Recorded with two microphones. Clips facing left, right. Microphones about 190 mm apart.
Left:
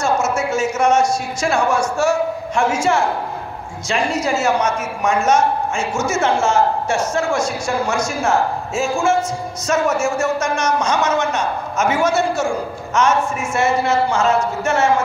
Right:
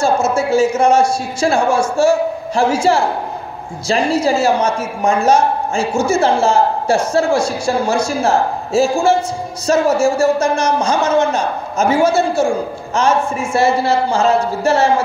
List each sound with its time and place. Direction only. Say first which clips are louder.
0.0 s a man's voice: right 4 dB; 30° right (ahead or behind)